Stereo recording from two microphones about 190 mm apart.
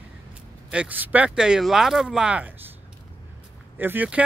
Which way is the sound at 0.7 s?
5° right (ahead or behind).